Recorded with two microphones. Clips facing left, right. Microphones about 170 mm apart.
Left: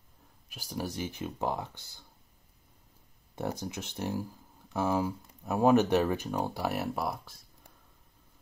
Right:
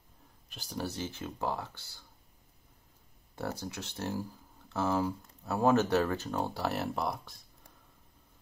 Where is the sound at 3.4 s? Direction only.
15° left (ahead or behind).